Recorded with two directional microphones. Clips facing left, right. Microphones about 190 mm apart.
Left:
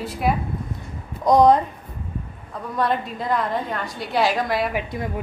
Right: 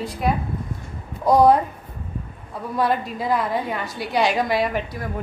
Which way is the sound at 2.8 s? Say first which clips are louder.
Right 1 dB; 5° right (ahead or behind).